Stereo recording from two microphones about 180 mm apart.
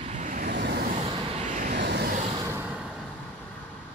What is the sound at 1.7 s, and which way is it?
Vehicle, 65° right (ahead or behind).